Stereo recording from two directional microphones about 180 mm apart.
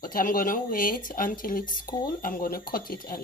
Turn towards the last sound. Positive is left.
turn(degrees=50)  # may be behind; listen again after turning